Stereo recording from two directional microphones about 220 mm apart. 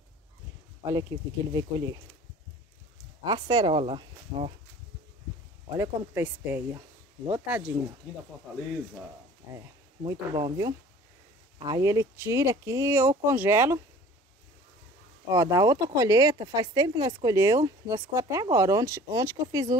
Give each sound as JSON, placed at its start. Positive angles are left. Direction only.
{"t": 1.5, "sound": "speech", "side_deg": -20}
{"t": 3.3, "sound": "speech", "side_deg": -20}
{"t": 5.7, "sound": "speech", "side_deg": -10}
{"t": 10.0, "sound": "speech", "side_deg": -20}
{"t": 15.3, "sound": "speech", "side_deg": -15}